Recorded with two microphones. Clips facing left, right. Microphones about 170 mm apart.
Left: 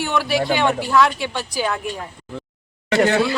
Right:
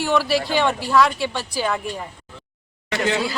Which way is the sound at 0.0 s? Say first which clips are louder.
Right 1 dB; centre (ahead or behind).